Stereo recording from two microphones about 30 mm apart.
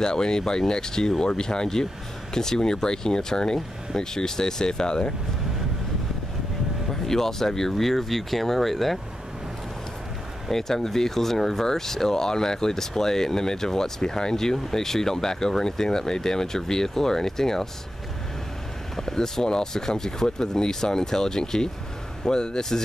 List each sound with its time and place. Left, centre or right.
0.0 s speech: left
6.9 s speech: centre
10.5 s speech: centre
18.9 s speech: centre